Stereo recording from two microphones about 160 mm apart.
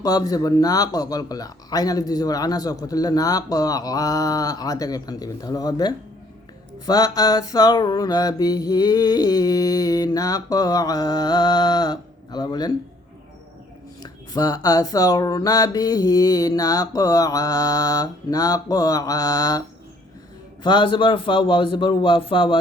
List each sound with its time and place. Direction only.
0.0 s speech: 25° left (ahead or behind)
14.0 s speech: 25° left (ahead or behind)
20.7 s a man's voice: 30° left (ahead or behind)